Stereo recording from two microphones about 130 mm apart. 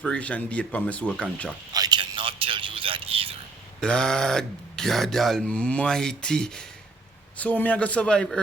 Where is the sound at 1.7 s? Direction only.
30° right (ahead or behind).